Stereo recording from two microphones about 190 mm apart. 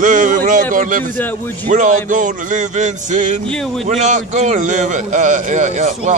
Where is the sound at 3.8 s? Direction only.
40° right (ahead or behind).